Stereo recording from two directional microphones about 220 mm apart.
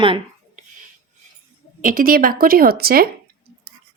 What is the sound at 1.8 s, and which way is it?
Speech, 40° right (ahead or behind).